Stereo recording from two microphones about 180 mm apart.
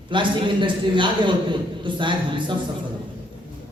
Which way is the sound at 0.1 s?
25° right (ahead or behind).